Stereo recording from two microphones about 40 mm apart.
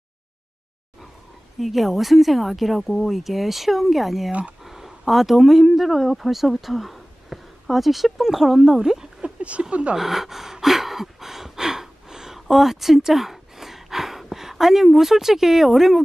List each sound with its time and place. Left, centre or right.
1.6 s speech: centre
4.3 s speech: right
4.6 s speech: centre
9.4 s speech: right
9.9 s gasp: centre